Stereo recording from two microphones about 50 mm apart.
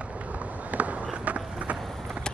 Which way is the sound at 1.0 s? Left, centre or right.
Right.